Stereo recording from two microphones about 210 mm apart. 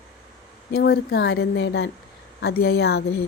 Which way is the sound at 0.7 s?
50° left (ahead or behind).